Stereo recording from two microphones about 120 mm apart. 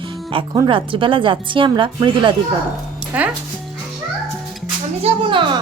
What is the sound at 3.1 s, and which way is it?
Speech, 10° right (ahead or behind).